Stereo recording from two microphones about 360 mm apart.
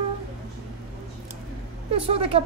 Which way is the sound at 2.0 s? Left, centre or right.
Centre.